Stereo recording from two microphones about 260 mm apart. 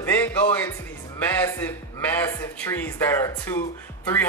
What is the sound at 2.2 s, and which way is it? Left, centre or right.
Speech, centre.